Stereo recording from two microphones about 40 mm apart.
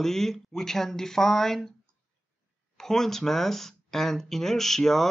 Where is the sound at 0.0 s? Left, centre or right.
Centre.